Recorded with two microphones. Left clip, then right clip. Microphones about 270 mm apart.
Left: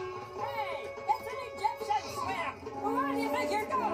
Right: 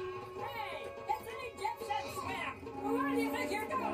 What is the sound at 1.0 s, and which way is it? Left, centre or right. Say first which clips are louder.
Music: left 6 dB; centre.